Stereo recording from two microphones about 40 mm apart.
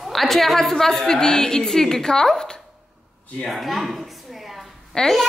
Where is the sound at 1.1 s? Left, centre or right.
Centre.